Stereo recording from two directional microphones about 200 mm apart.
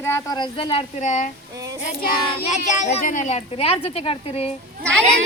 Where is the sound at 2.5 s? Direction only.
35° left (ahead or behind).